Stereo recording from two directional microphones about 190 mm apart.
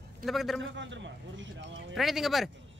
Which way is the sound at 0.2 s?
Centre (ahead or behind).